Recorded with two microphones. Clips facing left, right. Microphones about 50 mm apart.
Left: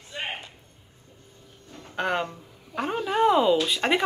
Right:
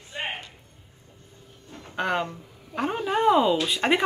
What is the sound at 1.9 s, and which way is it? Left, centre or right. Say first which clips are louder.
Speech: even; centre.